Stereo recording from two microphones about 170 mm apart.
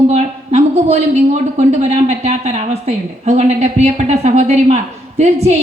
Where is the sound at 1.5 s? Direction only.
45° right (ahead or behind).